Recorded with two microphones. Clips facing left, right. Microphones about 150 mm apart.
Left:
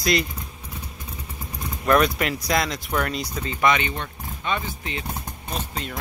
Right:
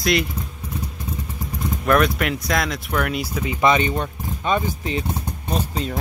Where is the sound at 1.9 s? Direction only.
Centre (ahead or behind).